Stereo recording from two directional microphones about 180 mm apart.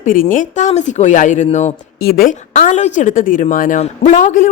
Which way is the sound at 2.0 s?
55° left (ahead or behind).